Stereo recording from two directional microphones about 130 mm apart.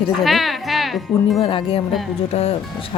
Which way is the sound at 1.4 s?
40° left (ahead or behind).